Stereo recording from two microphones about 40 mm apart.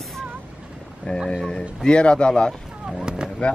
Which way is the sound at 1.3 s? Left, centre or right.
Centre.